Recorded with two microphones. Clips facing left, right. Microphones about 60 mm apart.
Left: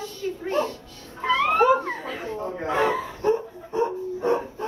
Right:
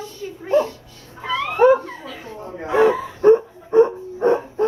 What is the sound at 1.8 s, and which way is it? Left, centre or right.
Laughter, left.